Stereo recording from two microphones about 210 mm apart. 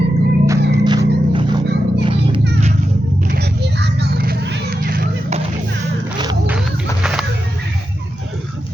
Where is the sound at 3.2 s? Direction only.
50° right (ahead or behind).